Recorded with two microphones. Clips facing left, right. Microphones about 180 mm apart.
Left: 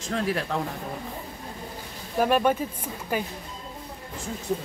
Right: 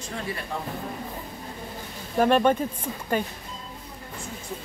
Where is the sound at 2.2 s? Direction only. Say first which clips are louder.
Right 2 dB; 5° left (ahead or behind).